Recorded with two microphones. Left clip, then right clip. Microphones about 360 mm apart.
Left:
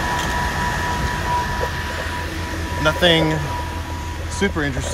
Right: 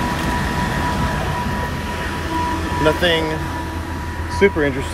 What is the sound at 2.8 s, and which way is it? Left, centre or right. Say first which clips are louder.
Speech: left 1 dB; left.